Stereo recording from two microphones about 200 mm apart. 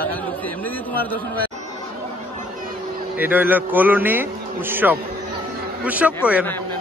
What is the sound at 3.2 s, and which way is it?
A man's voice, 10° right (ahead or behind).